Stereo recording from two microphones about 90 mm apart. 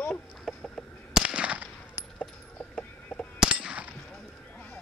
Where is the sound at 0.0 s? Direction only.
5° left (ahead or behind).